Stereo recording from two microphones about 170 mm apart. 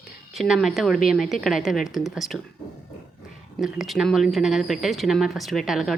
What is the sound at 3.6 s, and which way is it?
Speech, centre (ahead or behind).